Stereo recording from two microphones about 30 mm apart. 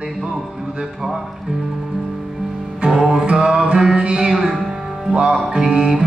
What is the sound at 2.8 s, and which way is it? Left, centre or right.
Music, centre.